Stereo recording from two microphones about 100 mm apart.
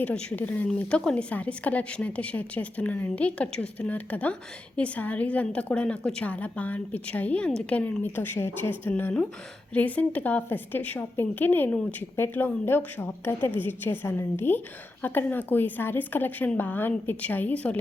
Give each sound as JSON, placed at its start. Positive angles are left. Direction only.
{"t": 0.0, "sound": "a woman's voice", "side_deg": 10}